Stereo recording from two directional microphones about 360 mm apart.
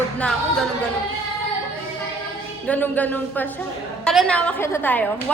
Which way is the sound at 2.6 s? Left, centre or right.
Centre.